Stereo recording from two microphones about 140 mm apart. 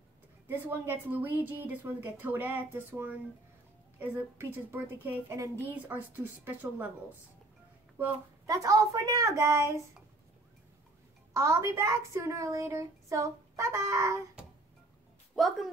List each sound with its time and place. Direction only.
0.5 s a woman's voice: 15° right (ahead or behind)
8.0 s a woman's voice: 25° right (ahead or behind)
11.3 s a woman's voice: 20° right (ahead or behind)
15.3 s speech: centre (ahead or behind)